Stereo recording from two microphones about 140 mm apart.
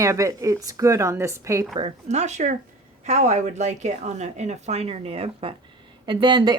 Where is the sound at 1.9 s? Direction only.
55° right (ahead or behind).